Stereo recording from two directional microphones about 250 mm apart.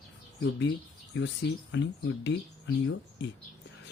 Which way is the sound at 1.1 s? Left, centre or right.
Left.